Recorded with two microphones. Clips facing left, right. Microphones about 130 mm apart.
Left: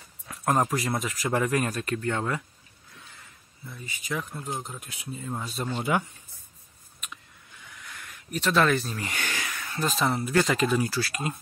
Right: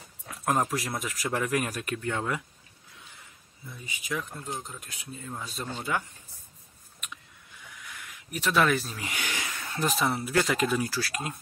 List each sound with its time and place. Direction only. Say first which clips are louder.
0.7 s speech: left 4 dB; centre (ahead or behind)
3.7 s speech: left 1 dB; 15° right (ahead or behind)
4.1 s speech: left 2 dB; 5° left (ahead or behind)
5.8 s speech: left 5 dB; 15° left (ahead or behind)
7.8 s a sound: left 1 dB; 5° right (ahead or behind)
9.4 s speech: even; 25° right (ahead or behind); by 11.3 s centre (ahead or behind)